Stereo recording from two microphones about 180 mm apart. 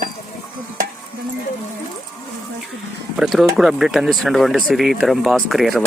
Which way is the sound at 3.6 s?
5° right (ahead or behind).